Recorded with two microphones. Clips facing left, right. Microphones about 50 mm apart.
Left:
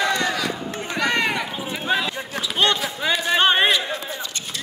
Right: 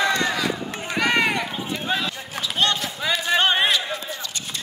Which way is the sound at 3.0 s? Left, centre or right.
Left.